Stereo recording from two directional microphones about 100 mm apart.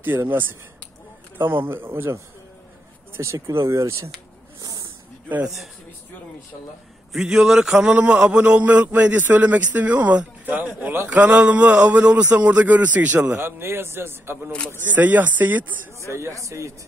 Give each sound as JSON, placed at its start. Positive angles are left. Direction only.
{"t": 0.0, "sound": "a man's voice", "side_deg": -20}
{"t": 3.2, "sound": "a man's voice", "side_deg": -30}
{"t": 4.6, "sound": "snake", "side_deg": -40}
{"t": 7.1, "sound": "a man's voice", "side_deg": -5}
{"t": 16.1, "sound": "a man's voice", "side_deg": -30}